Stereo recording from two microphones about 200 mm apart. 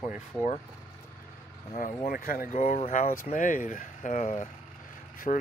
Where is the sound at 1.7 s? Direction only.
45° left (ahead or behind).